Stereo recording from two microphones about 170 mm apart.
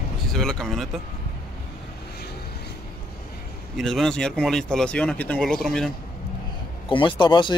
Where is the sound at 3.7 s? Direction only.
Centre (ahead or behind).